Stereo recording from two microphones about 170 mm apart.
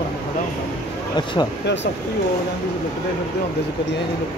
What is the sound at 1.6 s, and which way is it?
Speech, 90° left.